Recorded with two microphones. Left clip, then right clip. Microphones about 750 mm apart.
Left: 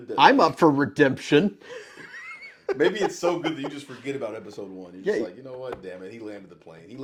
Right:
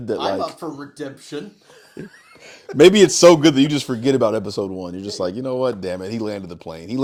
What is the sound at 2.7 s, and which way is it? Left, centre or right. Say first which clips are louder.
Speech: right 13 dB; right.